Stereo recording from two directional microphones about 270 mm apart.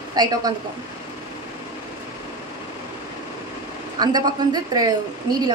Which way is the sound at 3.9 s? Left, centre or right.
Centre.